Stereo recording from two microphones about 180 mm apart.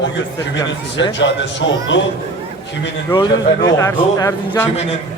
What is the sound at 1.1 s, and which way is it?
Speech, 80° left.